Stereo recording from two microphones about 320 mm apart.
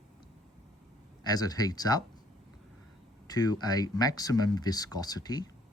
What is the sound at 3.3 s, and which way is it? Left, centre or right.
Speech, centre.